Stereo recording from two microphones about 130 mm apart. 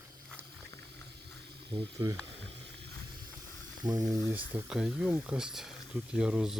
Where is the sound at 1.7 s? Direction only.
45° right (ahead or behind).